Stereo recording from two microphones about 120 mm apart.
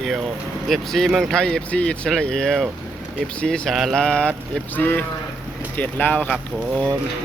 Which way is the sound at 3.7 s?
5° left (ahead or behind).